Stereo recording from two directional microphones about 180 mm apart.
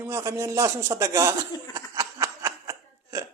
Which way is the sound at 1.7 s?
20° right (ahead or behind).